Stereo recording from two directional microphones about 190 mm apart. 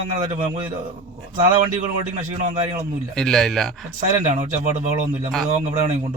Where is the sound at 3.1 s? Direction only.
5° left (ahead or behind).